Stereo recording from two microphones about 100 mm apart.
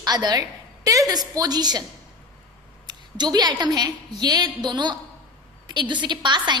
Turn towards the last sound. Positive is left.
turn(degrees=-50)  # may be behind; listen again after turning